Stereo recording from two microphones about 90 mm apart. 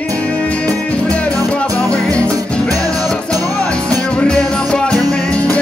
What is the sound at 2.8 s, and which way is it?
Music, 10° left (ahead or behind).